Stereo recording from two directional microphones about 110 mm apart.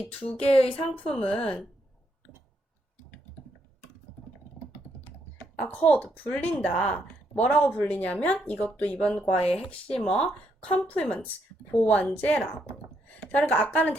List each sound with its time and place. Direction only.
0.0 s speech: 10° left (ahead or behind)
5.5 s speech: 10° left (ahead or behind)
9.2 s speech: 65° left (ahead or behind)
9.6 s speech: 10° left (ahead or behind)